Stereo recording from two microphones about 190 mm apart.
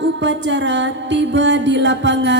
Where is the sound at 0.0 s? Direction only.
70° right (ahead or behind).